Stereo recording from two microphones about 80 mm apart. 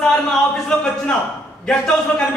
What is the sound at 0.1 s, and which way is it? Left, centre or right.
A man's voice, centre.